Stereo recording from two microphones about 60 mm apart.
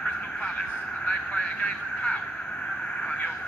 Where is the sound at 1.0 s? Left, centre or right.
Centre.